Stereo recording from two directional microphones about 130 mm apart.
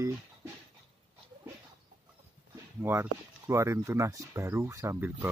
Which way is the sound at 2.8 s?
20° right (ahead or behind).